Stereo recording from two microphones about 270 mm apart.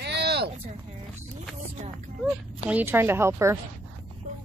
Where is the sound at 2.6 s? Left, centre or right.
Centre.